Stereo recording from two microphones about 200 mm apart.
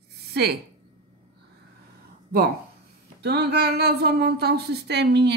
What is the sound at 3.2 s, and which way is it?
Speech, 55° right (ahead or behind).